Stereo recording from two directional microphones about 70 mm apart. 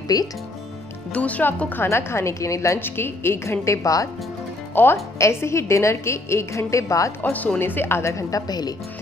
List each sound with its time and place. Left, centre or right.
0.1 s speech: left
1.1 s speech: left
1.8 s a woman's voice: left
2.8 s a woman's voice: left
4.7 s a woman's voice: left
7.2 s a woman's voice: left